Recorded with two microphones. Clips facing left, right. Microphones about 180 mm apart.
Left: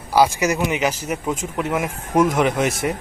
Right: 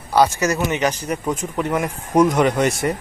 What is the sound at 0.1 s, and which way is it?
Speech, 10° left (ahead or behind).